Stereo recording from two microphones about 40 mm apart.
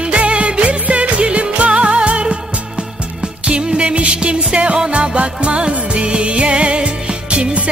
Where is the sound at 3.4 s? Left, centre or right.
Right.